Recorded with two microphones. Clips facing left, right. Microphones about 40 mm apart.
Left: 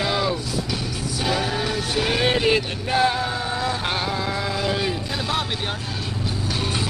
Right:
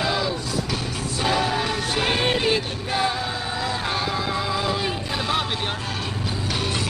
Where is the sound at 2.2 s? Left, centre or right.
Left.